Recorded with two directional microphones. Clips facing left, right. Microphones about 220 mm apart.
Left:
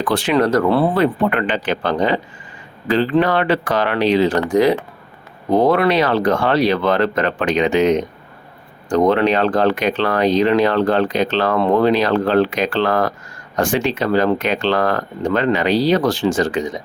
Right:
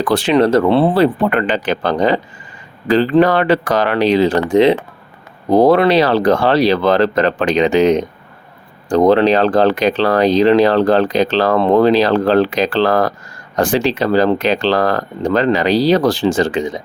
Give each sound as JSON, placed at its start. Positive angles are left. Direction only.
{"t": 0.0, "sound": "speech", "side_deg": -35}
{"t": 0.3, "sound": "speech", "side_deg": -25}
{"t": 5.5, "sound": "speech", "side_deg": -35}